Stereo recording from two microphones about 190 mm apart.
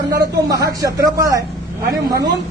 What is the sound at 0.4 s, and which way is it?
A man's voice, 20° right (ahead or behind).